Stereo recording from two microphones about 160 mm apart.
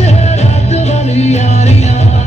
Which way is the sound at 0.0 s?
45° left (ahead or behind).